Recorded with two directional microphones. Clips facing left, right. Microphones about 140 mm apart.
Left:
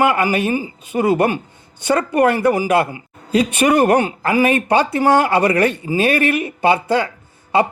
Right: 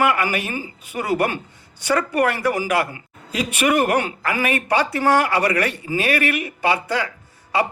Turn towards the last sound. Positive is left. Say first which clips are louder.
# left 5 dB
turn(degrees=25)  # may be behind; listen again after turning